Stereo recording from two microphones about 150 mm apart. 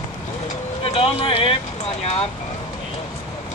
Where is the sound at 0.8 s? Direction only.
40° left (ahead or behind).